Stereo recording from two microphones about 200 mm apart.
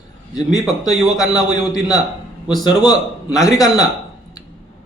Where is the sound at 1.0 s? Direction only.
20° left (ahead or behind).